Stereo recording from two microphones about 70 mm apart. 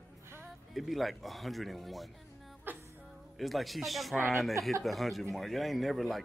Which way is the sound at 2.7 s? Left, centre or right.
Right.